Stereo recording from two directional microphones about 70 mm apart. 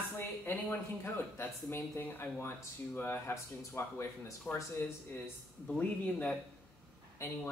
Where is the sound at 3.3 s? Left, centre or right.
Left.